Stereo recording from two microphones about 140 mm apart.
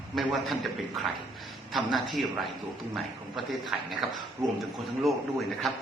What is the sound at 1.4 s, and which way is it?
A man's voice, centre (ahead or behind).